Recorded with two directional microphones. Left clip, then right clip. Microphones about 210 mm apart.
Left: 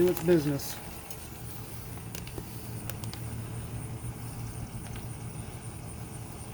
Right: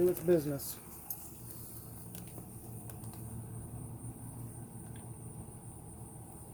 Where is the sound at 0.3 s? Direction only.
20° left (ahead or behind).